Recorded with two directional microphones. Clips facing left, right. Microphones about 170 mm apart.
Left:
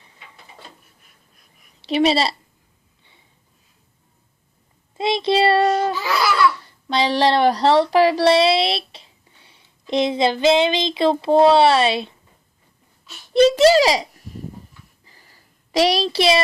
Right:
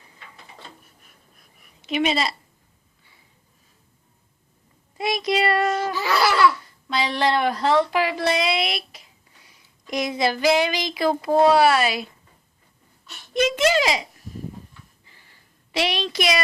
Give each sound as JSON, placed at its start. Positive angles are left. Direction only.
{"t": 1.8, "sound": "a child's voice", "side_deg": 35}
{"t": 4.9, "sound": "child singing", "side_deg": 25}
{"t": 6.6, "sound": "speech", "side_deg": 30}
{"t": 13.3, "sound": "a child's voice", "side_deg": 35}
{"t": 15.0, "sound": "a sound", "side_deg": 40}